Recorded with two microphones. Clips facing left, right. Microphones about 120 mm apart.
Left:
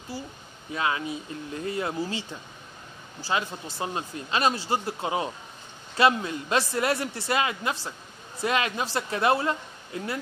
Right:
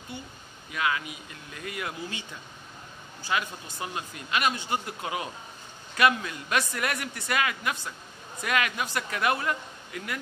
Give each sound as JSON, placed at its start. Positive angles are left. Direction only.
{"t": 0.1, "sound": "speech", "side_deg": 30}